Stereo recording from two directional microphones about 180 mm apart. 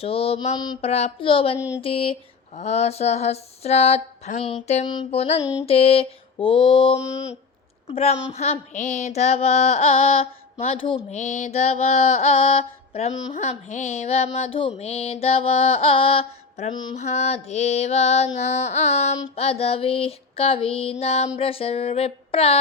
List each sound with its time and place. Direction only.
0.0 s music: 30° left (ahead or behind)
0.8 s music: 35° left (ahead or behind)
5.4 s mantra: 20° left (ahead or behind)
5.6 s mantra: 35° left (ahead or behind)
7.9 s music: 35° left (ahead or behind)
11.2 s music: 40° left (ahead or behind)